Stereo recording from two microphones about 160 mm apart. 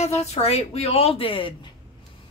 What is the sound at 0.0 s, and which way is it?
A woman's voice, 40° left (ahead or behind).